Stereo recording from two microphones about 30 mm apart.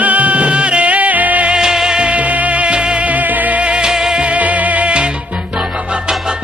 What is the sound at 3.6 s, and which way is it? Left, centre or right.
Music, right.